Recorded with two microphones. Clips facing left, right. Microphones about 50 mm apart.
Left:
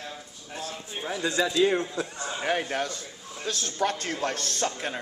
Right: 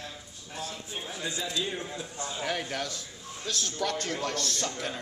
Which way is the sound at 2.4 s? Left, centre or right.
Left.